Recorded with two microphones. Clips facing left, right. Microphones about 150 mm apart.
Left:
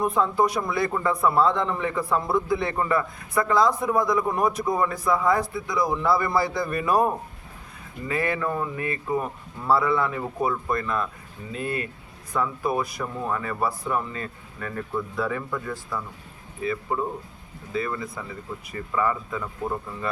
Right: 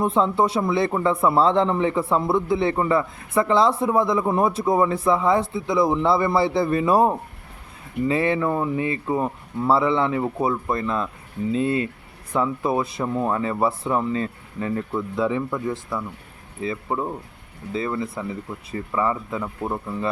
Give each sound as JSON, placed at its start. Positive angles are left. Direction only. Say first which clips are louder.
{"t": 0.0, "sound": "a man's voice", "louder": "right 2 dB", "side_deg": -25}